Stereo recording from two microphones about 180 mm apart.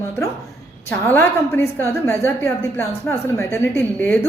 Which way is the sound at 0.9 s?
10° left (ahead or behind).